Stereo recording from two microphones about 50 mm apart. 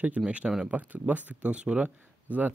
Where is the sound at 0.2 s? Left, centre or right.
Centre.